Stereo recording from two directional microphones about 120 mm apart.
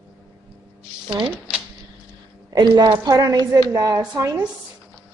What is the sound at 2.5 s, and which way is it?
A woman's voice, 35° right (ahead or behind).